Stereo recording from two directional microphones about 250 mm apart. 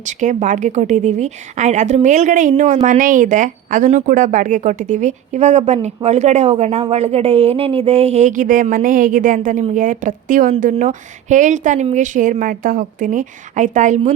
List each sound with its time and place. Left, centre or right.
0.0 s a woman's voice: right